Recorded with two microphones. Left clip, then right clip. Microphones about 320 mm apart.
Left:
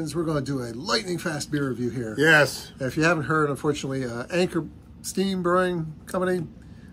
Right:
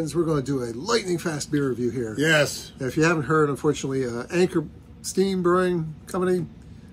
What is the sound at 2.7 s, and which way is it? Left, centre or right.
Speech, centre.